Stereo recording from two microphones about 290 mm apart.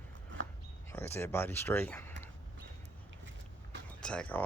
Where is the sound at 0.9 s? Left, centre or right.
Centre.